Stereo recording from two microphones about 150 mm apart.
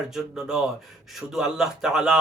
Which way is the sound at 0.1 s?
5° right (ahead or behind).